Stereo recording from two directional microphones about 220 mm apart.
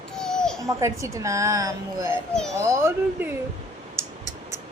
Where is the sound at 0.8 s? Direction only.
15° right (ahead or behind).